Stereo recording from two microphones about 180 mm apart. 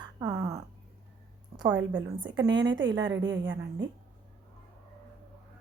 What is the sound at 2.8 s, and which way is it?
A woman's voice, 90° right.